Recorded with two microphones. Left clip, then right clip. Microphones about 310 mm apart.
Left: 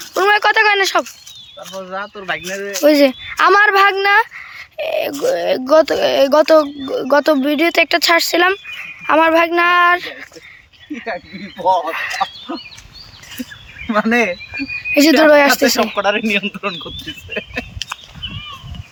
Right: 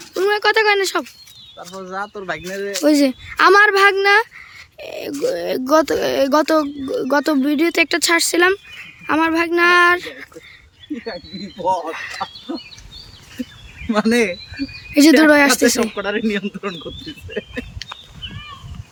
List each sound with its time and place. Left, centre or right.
0.2 s speech: centre
1.5 s speech: centre
11.6 s speech: centre
11.9 s speech: centre
13.8 s speech: centre
16.0 s speech: centre
17.3 s a sound: centre